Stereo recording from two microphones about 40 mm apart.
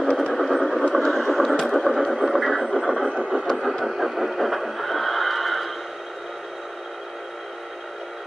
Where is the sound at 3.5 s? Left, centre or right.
Centre.